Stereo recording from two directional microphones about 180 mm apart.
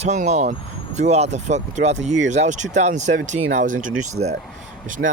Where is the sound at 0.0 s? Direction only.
40° right (ahead or behind).